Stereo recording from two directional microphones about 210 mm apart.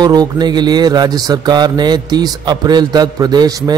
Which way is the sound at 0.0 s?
20° right (ahead or behind).